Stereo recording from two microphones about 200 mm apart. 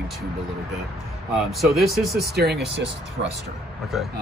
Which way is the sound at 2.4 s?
55° right (ahead or behind).